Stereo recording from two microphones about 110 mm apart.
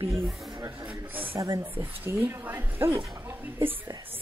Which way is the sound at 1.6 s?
20° right (ahead or behind).